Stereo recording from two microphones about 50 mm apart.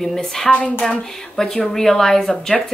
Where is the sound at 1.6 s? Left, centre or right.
Centre.